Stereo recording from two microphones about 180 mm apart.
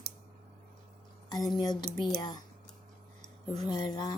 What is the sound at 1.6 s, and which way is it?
Speech, 25° left (ahead or behind).